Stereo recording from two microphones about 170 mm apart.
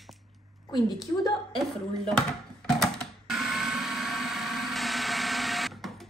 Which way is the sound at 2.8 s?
Centre (ahead or behind).